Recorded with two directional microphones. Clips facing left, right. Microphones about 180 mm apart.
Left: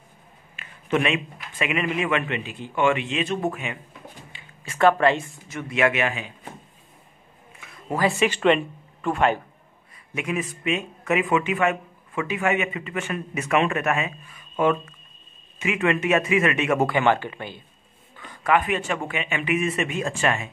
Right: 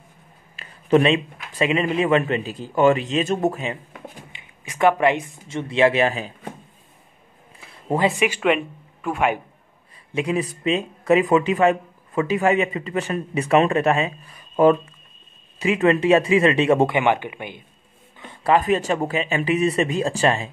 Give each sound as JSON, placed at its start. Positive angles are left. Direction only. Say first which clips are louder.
{"t": 0.6, "sound": "speech", "louder": "right 7 dB", "side_deg": -35}
{"t": 4.3, "sound": "a sound", "louder": "even", "side_deg": -20}
{"t": 5.5, "sound": "speech", "louder": "right 4 dB", "side_deg": -30}
{"t": 7.6, "sound": "speech", "louder": "right 3 dB", "side_deg": -30}
{"t": 10.1, "sound": "speech", "louder": "right 5 dB", "side_deg": -30}